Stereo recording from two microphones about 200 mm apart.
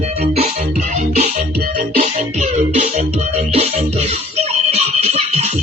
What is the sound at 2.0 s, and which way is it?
Music, 35° right (ahead or behind).